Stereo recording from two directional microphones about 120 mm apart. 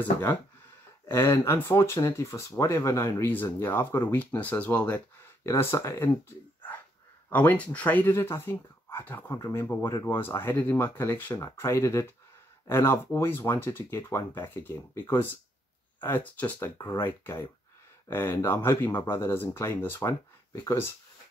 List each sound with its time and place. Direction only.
1.0 s speech: 20° left (ahead or behind)
7.2 s speech: 15° left (ahead or behind)